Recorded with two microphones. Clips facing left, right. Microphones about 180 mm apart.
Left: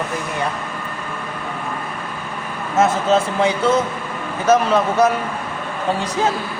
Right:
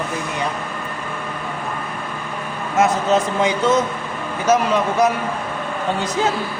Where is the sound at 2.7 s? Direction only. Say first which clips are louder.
Left 1 dB; 15° right (ahead or behind).